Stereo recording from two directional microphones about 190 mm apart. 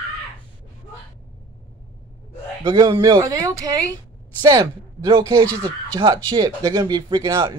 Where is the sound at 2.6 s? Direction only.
20° right (ahead or behind).